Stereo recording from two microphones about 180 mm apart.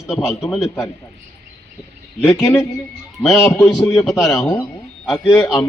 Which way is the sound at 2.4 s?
15° left (ahead or behind).